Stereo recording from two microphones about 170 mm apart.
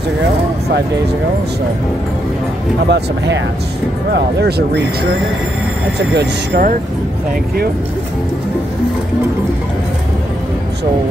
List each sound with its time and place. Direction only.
2.9 s speech: 90° right
4.1 s speech: 75° right (ahead or behind)
5.9 s speech: 80° right